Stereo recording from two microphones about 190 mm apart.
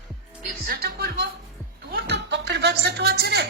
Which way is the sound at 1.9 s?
60° right (ahead or behind).